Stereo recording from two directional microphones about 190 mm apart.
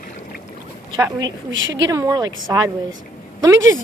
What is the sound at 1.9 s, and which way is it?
Speech, 20° right (ahead or behind).